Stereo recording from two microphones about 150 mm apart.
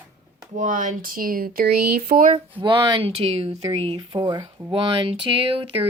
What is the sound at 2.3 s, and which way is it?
Speech, 35° right (ahead or behind).